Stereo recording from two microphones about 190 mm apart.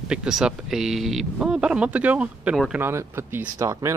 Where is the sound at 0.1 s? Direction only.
5° right (ahead or behind).